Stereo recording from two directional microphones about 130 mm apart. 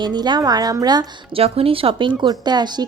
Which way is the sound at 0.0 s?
35° right (ahead or behind).